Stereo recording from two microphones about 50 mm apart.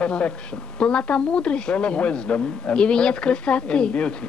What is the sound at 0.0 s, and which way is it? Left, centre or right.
A woman's voice, left.